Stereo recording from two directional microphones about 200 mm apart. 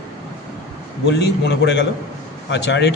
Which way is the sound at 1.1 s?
55° left (ahead or behind).